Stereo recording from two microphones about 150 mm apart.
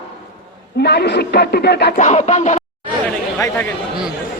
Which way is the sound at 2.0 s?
50° left (ahead or behind).